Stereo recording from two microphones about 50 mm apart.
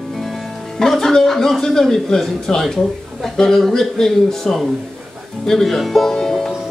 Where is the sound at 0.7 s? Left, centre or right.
Centre.